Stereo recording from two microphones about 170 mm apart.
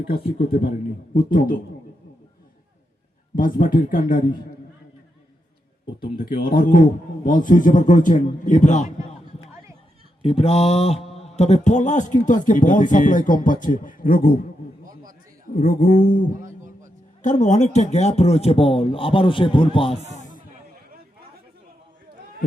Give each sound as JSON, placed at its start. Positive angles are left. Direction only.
{"t": 1.1, "sound": "speech", "side_deg": 55}
{"t": 3.3, "sound": "a man's voice", "side_deg": 55}
{"t": 6.1, "sound": "a man's voice", "side_deg": 60}
{"t": 10.2, "sound": "speech", "side_deg": 35}
{"t": 15.5, "sound": "a man's voice", "side_deg": 60}
{"t": 16.4, "sound": "music", "side_deg": -45}
{"t": 17.2, "sound": "speech", "side_deg": 45}